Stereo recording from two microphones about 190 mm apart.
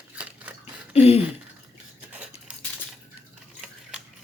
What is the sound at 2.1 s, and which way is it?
Cutlery, 5° right (ahead or behind).